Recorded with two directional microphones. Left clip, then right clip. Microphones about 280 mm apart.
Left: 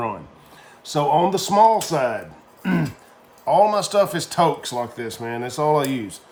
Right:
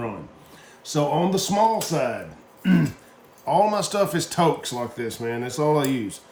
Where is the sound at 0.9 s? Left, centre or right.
Centre.